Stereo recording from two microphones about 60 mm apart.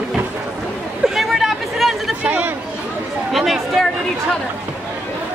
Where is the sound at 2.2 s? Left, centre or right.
Right.